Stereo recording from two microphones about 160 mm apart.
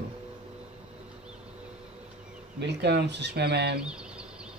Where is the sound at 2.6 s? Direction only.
90° right.